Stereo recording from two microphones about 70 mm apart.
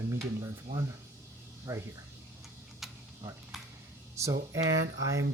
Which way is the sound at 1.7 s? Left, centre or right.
Right.